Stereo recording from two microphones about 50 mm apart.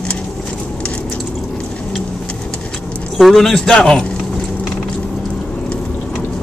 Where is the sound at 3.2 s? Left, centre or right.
Centre.